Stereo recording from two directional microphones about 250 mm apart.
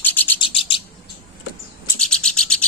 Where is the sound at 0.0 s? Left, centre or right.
Centre.